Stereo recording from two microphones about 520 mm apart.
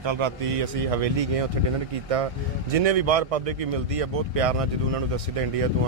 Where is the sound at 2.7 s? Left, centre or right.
Right.